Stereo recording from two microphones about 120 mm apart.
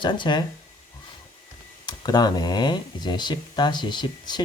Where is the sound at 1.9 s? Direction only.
35° left (ahead or behind).